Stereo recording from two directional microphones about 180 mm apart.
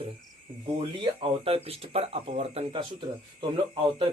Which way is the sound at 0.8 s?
30° right (ahead or behind).